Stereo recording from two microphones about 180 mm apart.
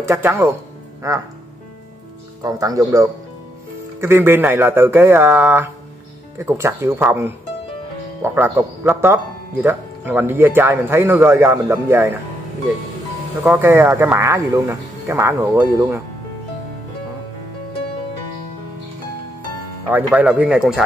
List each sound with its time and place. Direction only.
0.0 s speech: 15° right (ahead or behind)
2.4 s speech: 20° right (ahead or behind)
13.5 s speech: 10° right (ahead or behind)
19.9 s a man's voice: 10° right (ahead or behind)